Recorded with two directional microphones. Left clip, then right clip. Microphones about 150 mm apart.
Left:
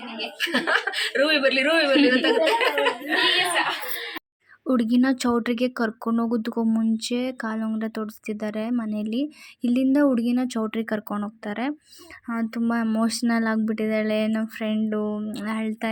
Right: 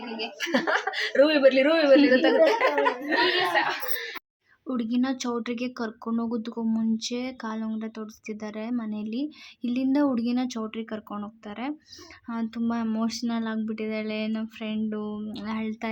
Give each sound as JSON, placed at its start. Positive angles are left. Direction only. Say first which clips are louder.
{"t": 0.3, "sound": "speech", "louder": "left 3 dB", "side_deg": -45}
{"t": 4.6, "sound": "speech", "louder": "left 6 dB", "side_deg": 35}
{"t": 14.8, "sound": "a sound", "louder": "left 4 dB", "side_deg": 15}